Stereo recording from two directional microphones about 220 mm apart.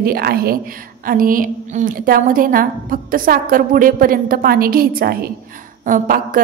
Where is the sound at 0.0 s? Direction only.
45° right (ahead or behind).